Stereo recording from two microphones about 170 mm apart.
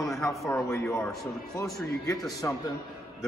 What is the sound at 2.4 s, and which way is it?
Speech, 15° left (ahead or behind).